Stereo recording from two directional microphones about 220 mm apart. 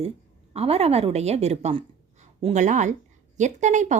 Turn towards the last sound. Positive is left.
turn(degrees=-35)  # may be behind; listen again after turning